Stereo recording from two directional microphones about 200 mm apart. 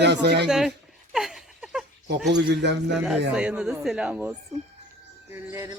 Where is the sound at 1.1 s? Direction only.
Centre (ahead or behind).